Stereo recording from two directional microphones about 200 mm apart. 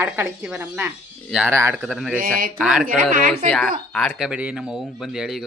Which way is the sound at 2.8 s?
45° right (ahead or behind).